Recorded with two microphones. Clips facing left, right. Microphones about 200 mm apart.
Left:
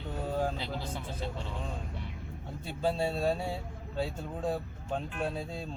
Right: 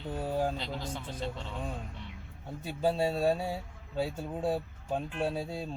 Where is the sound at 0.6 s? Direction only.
10° left (ahead or behind).